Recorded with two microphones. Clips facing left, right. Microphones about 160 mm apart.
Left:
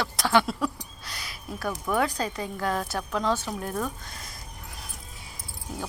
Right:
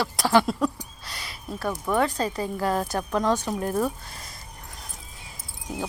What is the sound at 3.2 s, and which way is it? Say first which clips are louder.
Speech: right 3 dB; 15° right (ahead or behind).